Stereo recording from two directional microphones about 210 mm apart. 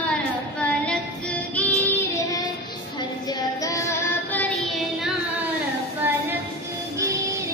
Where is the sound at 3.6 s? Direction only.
15° left (ahead or behind).